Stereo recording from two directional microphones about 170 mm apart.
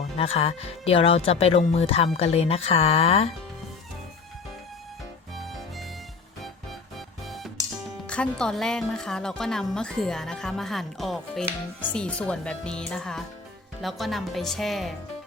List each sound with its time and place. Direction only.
0.0 s speech: 35° left (ahead or behind)
6.4 s music: centre (ahead or behind)
8.0 s speech: 5° left (ahead or behind)